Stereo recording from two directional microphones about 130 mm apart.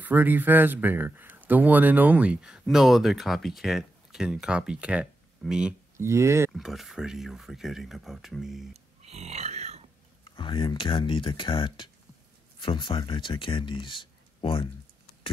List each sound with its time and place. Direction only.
0.0 s speech: 15° right (ahead or behind)
5.9 s speech: 20° right (ahead or behind)
6.5 s speech: centre (ahead or behind)
9.0 s grunt: 55° right (ahead or behind)
10.2 s speech: 35° left (ahead or behind)